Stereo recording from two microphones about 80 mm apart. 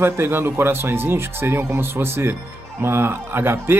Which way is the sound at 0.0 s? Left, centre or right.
Right.